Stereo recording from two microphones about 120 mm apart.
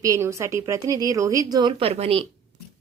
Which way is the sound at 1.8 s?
60° right (ahead or behind).